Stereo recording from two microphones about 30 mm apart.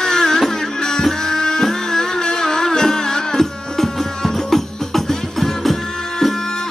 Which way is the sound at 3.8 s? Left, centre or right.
Centre.